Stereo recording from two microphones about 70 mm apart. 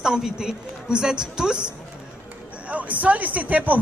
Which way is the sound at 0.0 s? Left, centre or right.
Centre.